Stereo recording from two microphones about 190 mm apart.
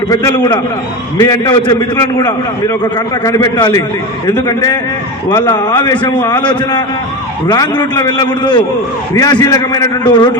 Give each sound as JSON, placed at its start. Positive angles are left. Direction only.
{"t": 0.1, "sound": "a man's voice", "side_deg": 20}
{"t": 7.4, "sound": "a man's voice", "side_deg": 20}